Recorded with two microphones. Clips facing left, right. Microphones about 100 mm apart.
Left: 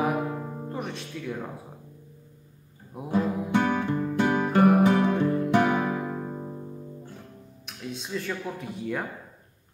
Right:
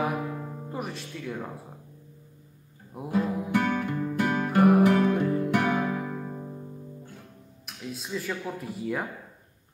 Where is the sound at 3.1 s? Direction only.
20° left (ahead or behind).